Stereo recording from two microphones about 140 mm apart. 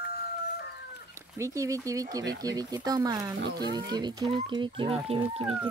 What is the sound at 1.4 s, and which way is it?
Speech, 20° right (ahead or behind).